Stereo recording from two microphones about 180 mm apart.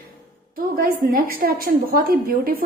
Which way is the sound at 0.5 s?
55° right (ahead or behind).